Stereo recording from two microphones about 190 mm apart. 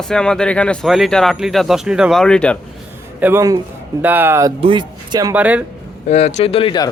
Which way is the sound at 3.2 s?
15° right (ahead or behind).